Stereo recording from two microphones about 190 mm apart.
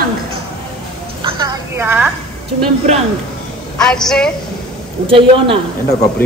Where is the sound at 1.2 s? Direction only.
25° right (ahead or behind).